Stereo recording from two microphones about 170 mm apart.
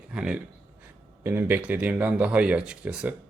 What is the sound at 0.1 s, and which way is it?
Speech, 5° right (ahead or behind).